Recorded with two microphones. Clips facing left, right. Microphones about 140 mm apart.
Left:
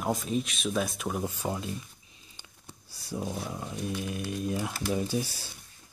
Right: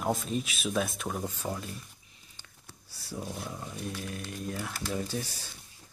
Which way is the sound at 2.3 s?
15° left (ahead or behind).